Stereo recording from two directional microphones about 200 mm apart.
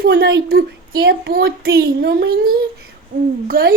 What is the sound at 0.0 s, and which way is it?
A child's voice, 60° right (ahead or behind).